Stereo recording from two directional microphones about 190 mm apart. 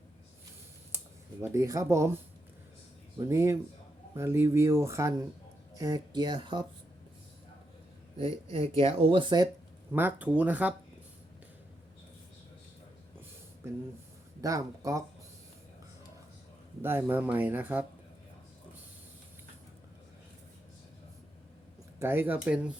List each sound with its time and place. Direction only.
0.9 s speech: 15° right (ahead or behind)
3.2 s speech: 15° right (ahead or behind)
8.8 s speech: 30° right (ahead or behind)
9.9 s speech: 10° right (ahead or behind)
14.4 s speech: 20° right (ahead or behind)
16.8 s speech: 10° right (ahead or behind)
21.9 s speech: 10° right (ahead or behind)